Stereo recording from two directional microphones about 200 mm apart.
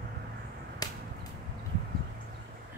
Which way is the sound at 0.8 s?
20° left (ahead or behind).